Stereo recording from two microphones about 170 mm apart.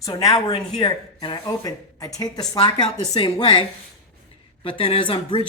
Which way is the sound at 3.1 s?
25° left (ahead or behind).